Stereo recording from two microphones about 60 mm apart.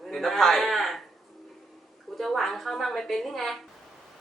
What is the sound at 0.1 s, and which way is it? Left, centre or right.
Speech, centre.